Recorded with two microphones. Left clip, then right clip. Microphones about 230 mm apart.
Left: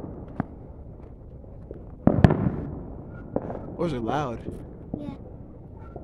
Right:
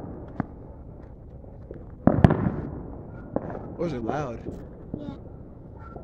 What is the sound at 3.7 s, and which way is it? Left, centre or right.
Speech, centre.